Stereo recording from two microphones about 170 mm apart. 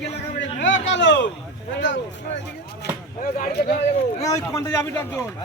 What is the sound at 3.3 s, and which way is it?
Speech, 60° left (ahead or behind).